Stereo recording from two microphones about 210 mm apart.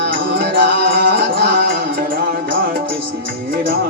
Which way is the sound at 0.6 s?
55° right (ahead or behind).